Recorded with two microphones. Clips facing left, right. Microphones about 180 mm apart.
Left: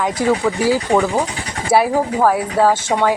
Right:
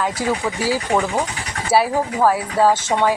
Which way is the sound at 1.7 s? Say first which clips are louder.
Left 3 dB; 15° left (ahead or behind).